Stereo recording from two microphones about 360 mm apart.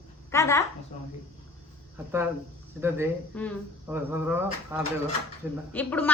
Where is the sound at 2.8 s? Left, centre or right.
Centre.